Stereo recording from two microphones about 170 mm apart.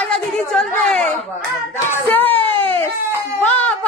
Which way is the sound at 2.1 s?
10° left (ahead or behind).